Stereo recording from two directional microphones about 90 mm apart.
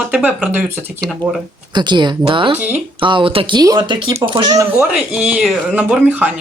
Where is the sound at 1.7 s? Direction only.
55° right (ahead or behind).